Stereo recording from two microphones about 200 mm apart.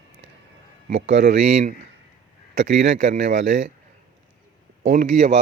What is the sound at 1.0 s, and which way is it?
Speech, 60° right (ahead or behind).